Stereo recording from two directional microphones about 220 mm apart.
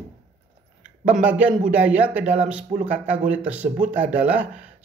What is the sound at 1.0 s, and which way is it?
Speech, 5° right (ahead or behind).